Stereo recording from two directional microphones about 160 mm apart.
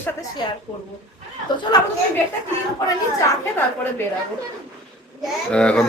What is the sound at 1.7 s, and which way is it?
Speech, 25° left (ahead or behind).